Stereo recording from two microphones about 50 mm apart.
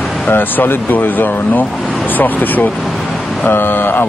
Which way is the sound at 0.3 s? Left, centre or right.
Left.